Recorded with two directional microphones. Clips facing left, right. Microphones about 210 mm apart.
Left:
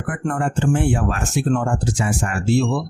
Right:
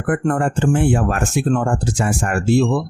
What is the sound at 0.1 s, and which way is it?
Speech, 50° right (ahead or behind).